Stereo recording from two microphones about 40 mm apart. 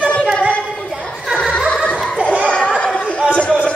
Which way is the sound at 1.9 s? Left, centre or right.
Centre.